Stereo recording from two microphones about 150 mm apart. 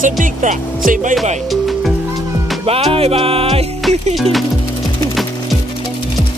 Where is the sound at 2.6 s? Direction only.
40° right (ahead or behind).